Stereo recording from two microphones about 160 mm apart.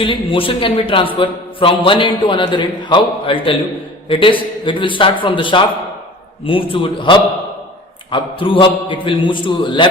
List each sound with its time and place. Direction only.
0.0 s a man's voice: 35° left (ahead or behind)